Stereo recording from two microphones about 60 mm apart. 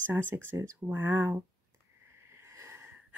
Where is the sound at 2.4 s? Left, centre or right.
Right.